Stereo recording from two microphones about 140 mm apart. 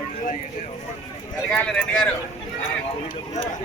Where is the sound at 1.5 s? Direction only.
5° left (ahead or behind).